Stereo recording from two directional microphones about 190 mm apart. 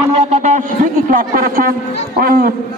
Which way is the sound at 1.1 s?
50° right (ahead or behind).